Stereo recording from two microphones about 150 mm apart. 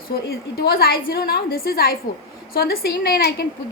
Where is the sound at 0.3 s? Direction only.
90° left.